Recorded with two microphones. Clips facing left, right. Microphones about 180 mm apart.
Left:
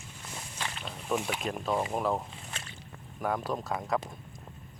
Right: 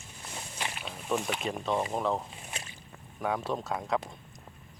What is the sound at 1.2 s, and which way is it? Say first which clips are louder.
Speech: even; 5° left (ahead or behind).